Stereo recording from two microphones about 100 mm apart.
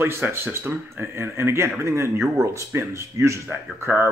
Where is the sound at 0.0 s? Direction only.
25° right (ahead or behind).